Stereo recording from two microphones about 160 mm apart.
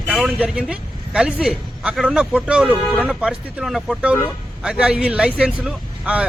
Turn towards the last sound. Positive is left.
turn(degrees=-5)  # may be behind; listen again after turning